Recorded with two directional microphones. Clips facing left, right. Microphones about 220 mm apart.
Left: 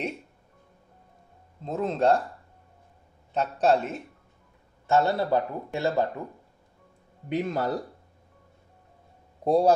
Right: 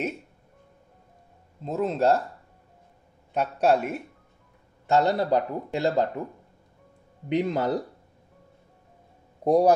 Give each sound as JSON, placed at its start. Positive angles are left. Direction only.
{"t": 1.6, "sound": "speech", "side_deg": -5}
{"t": 3.3, "sound": "speech", "side_deg": -10}
{"t": 7.2, "sound": "speech", "side_deg": -20}
{"t": 9.4, "sound": "a man's voice", "side_deg": -15}